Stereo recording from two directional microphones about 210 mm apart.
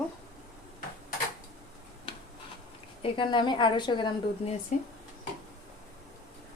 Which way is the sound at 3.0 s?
25° left (ahead or behind).